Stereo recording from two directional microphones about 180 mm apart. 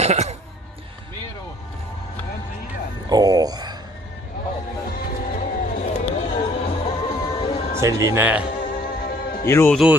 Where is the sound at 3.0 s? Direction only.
20° right (ahead or behind).